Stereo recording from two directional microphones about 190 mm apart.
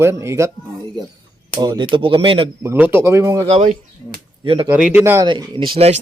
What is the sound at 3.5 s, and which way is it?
Speech, 35° right (ahead or behind).